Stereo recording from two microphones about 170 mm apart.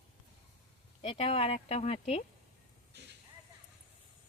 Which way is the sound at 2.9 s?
85° right.